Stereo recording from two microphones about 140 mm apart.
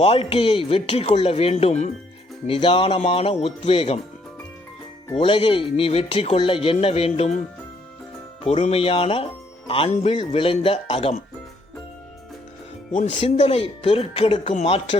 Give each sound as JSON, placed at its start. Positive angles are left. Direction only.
{"t": 0.0, "sound": "speech", "side_deg": 45}
{"t": 5.1, "sound": "speech", "side_deg": 40}
{"t": 8.4, "sound": "speech", "side_deg": 50}
{"t": 9.9, "sound": "speech", "side_deg": 50}
{"t": 10.2, "sound": "speech", "side_deg": 40}
{"t": 12.9, "sound": "speech", "side_deg": 60}
{"t": 13.4, "sound": "speech", "side_deg": 40}
{"t": 14.5, "sound": "speech", "side_deg": 50}